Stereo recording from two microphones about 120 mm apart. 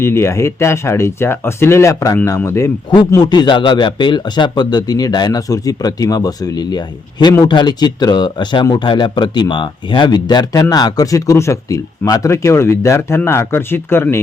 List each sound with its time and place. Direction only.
0.0 s speech: 20° left (ahead or behind)
3.1 s speech: 35° left (ahead or behind); by 14.2 s 20° left (ahead or behind)